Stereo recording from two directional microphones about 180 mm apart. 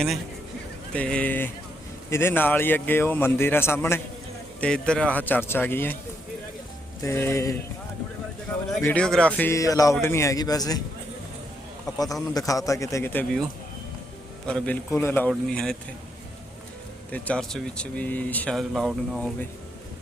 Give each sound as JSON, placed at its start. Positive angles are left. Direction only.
{"t": 0.9, "sound": "speech", "side_deg": 5}
{"t": 7.0, "sound": "speech", "side_deg": 15}
{"t": 8.8, "sound": "a man's voice", "side_deg": 5}
{"t": 11.9, "sound": "a man's voice", "side_deg": 20}
{"t": 14.4, "sound": "a man's voice", "side_deg": 5}
{"t": 17.1, "sound": "speech", "side_deg": 5}